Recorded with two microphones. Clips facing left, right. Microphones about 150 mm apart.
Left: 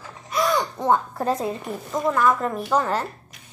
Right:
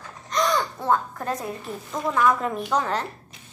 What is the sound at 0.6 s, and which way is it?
Speech, 20° left (ahead or behind).